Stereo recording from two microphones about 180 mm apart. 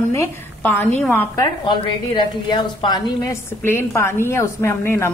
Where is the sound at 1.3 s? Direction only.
25° left (ahead or behind).